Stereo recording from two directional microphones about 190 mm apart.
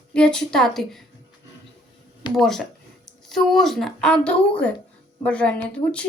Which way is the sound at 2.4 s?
Centre (ahead or behind).